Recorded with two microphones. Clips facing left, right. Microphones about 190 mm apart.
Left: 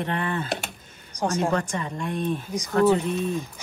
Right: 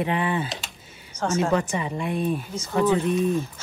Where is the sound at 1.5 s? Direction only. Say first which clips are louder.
Right 3 dB; 10° right (ahead or behind).